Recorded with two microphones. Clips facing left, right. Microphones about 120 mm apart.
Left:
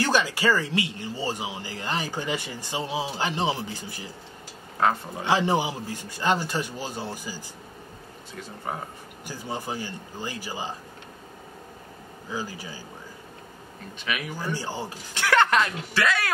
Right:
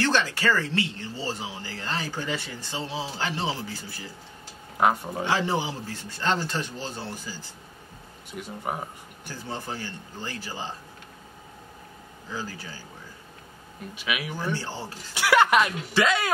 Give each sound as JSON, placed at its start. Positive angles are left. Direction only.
{"t": 0.0, "sound": "speech", "side_deg": 10}
{"t": 4.7, "sound": "speech", "side_deg": -15}
{"t": 5.2, "sound": "speech", "side_deg": 15}
{"t": 8.3, "sound": "speech", "side_deg": -15}
{"t": 9.2, "sound": "speech", "side_deg": 15}
{"t": 12.3, "sound": "speech", "side_deg": 15}
{"t": 13.9, "sound": "speech", "side_deg": -10}
{"t": 14.5, "sound": "speech", "side_deg": 15}
{"t": 15.1, "sound": "speech", "side_deg": -10}